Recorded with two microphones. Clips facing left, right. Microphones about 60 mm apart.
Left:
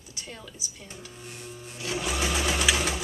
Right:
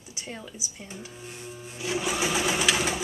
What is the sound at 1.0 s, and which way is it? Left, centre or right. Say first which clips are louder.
Sewing machine: right 1 dB; centre.